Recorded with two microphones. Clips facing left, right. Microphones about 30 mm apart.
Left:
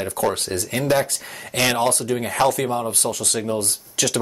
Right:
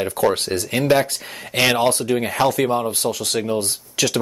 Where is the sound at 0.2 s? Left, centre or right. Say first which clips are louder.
Right 3 dB; right.